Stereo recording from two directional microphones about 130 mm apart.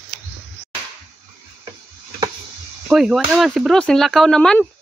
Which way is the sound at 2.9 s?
5° right (ahead or behind).